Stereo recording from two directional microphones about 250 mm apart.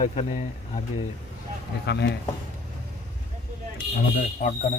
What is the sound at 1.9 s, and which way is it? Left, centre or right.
Speech, left.